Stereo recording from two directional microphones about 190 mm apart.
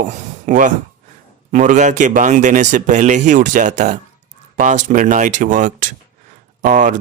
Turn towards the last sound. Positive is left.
turn(degrees=-40)  # may be behind; listen again after turning